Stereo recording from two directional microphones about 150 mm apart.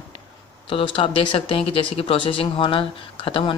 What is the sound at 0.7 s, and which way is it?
Speech, 35° left (ahead or behind).